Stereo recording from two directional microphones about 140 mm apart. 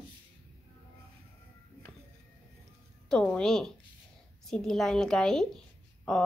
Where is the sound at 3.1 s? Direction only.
5° left (ahead or behind).